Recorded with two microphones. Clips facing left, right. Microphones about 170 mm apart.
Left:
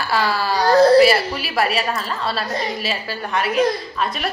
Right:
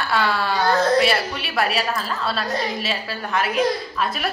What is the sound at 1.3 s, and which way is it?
A woman's voice, centre (ahead or behind).